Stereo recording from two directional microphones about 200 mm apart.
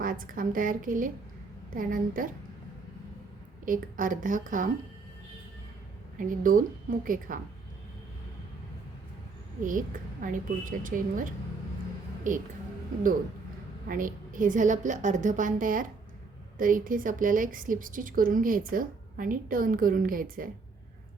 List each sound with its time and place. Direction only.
0.0 s a woman's voice: 45° right (ahead or behind)
3.7 s a woman's voice: 40° right (ahead or behind)
6.1 s a woman's voice: 40° right (ahead or behind)
9.6 s a woman's voice: 40° right (ahead or behind)
13.8 s a woman's voice: 45° right (ahead or behind)